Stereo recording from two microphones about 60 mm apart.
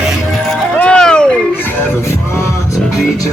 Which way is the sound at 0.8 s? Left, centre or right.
Centre.